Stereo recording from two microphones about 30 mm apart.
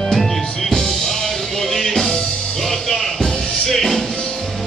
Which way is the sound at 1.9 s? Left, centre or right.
Centre.